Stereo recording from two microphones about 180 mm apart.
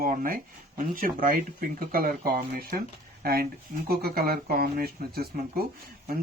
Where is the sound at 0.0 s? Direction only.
50° right (ahead or behind).